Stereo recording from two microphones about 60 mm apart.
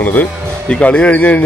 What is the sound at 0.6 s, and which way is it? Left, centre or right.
Speech, centre.